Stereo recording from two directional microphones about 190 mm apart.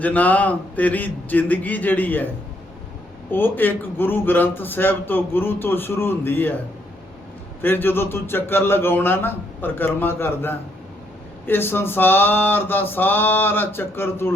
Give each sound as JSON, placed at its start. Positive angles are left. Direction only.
{"t": 0.0, "sound": "a man's voice", "side_deg": 10}
{"t": 3.3, "sound": "a man's voice", "side_deg": 10}
{"t": 7.6, "sound": "a man's voice", "side_deg": 10}